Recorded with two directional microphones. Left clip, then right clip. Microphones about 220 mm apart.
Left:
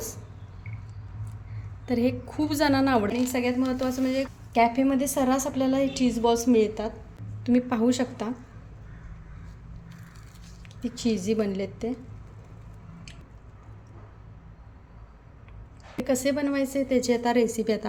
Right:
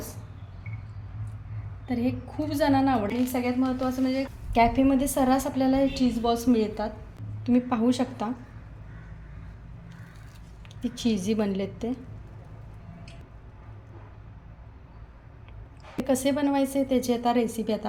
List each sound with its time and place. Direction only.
1.9 s a woman's voice: 30° left (ahead or behind)
3.2 s a woman's voice: 15° left (ahead or behind)
4.5 s a woman's voice: centre (ahead or behind)
10.8 s a woman's voice: centre (ahead or behind)
16.0 s a woman's voice: 5° left (ahead or behind)